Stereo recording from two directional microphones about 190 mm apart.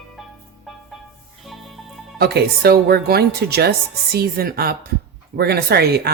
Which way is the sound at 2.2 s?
55° right (ahead or behind).